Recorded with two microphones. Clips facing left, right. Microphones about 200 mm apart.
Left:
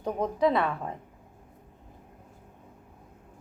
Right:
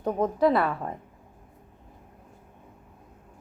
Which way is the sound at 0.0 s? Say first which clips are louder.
Right 3 dB; 5° right (ahead or behind).